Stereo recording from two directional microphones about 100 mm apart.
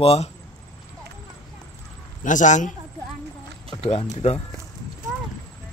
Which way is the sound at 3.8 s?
85° left.